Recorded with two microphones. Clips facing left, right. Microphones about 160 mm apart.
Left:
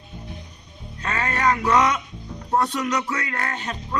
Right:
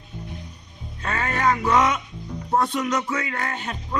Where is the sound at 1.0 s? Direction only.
5° right (ahead or behind).